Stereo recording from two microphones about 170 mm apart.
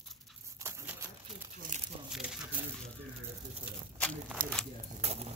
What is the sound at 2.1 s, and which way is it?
Crumpling, 5° right (ahead or behind).